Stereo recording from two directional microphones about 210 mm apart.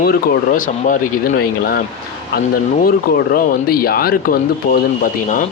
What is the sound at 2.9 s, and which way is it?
Speech, 45° left (ahead or behind).